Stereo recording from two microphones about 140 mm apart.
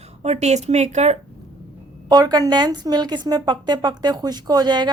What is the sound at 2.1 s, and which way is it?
Speech, 30° right (ahead or behind).